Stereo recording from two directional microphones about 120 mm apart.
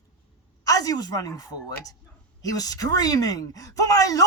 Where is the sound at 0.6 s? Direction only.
30° left (ahead or behind).